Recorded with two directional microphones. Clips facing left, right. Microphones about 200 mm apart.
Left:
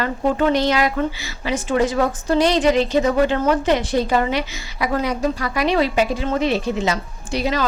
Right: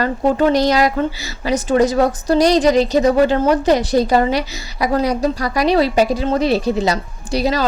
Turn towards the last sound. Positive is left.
turn(degrees=-35)  # may be behind; listen again after turning